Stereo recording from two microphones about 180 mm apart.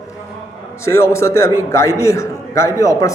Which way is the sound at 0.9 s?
15° left (ahead or behind).